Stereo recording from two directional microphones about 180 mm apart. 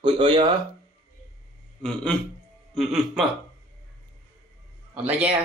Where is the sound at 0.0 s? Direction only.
25° right (ahead or behind).